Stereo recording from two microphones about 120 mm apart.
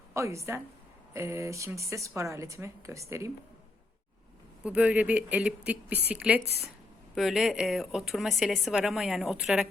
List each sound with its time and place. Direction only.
0.1 s speech: 25° right (ahead or behind)
4.6 s speech: 10° right (ahead or behind)